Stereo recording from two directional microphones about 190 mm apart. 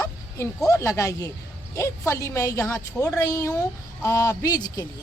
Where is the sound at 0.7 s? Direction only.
15° left (ahead or behind).